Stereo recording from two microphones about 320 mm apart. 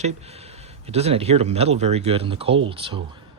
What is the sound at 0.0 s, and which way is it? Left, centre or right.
Speech, centre.